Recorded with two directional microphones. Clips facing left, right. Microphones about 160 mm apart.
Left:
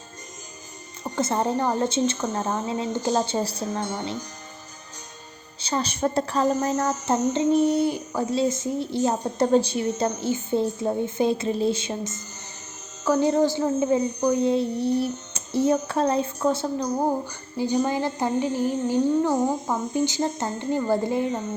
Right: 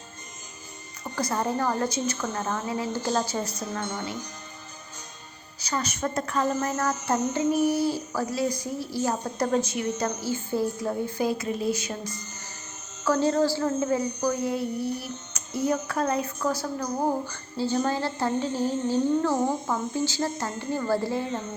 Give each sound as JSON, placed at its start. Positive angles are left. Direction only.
{"t": 1.0, "sound": "a woman's voice", "side_deg": 25}
{"t": 5.5, "sound": "a woman's voice", "side_deg": 30}
{"t": 6.5, "sound": "a woman's voice", "side_deg": 20}